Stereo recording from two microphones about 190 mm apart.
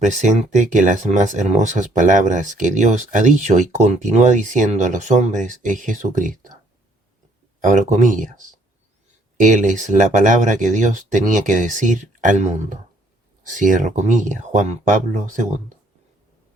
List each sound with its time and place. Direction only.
0.0 s speech: 40° right (ahead or behind)
7.6 s speech: 40° right (ahead or behind)